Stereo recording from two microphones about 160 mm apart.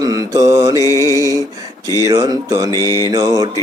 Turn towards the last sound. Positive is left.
turn(degrees=-25)  # may be behind; listen again after turning